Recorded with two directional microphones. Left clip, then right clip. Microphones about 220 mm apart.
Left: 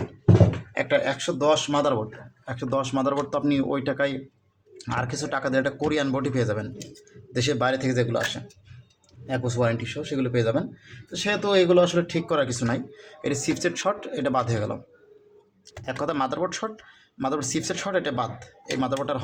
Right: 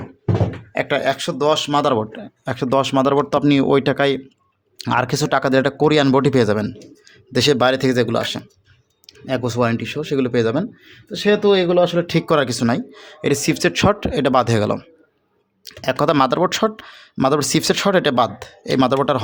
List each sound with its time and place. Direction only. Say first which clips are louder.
0.7 s speech: right 8 dB; 50° right (ahead or behind)